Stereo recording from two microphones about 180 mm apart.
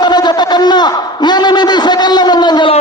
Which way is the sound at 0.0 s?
25° left (ahead or behind).